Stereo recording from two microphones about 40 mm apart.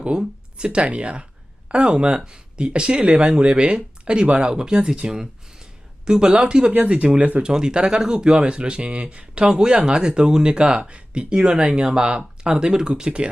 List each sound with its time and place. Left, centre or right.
0.2 s speech: right
5.1 s a sound: centre
6.1 s speech: right